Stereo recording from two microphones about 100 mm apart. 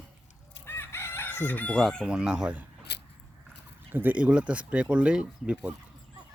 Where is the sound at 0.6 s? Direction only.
20° left (ahead or behind).